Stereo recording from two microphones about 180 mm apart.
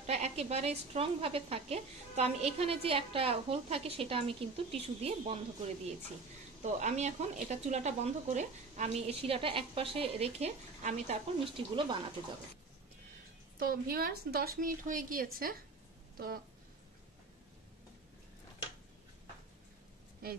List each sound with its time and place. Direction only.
0.0 s a woman's voice: 35° right (ahead or behind)
6.6 s a woman's voice: 40° right (ahead or behind)
13.6 s a woman's voice: 55° right (ahead or behind)